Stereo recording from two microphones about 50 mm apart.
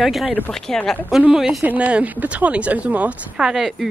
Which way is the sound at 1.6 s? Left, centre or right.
Right.